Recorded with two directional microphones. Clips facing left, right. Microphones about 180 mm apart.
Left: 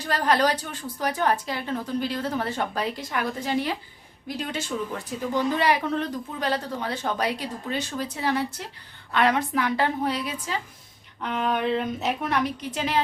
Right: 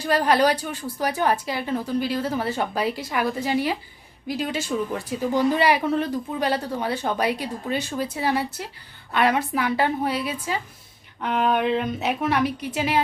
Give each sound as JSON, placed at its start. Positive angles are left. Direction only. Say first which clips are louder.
{"t": 0.0, "sound": "a woman's voice", "louder": "right 3 dB", "side_deg": -10}
{"t": 11.3, "sound": "a sound", "louder": "right 4 dB", "side_deg": -55}
{"t": 11.6, "sound": "speech", "louder": "right 2 dB", "side_deg": 0}